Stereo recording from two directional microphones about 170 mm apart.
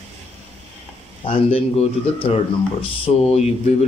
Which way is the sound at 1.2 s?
35° left (ahead or behind).